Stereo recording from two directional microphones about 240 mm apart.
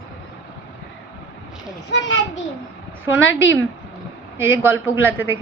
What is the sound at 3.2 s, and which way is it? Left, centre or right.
Speech, left.